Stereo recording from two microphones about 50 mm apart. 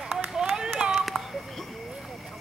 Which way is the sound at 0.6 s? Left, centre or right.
Centre.